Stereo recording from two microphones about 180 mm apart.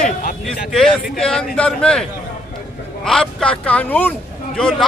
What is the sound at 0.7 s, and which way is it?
A man's voice, centre (ahead or behind).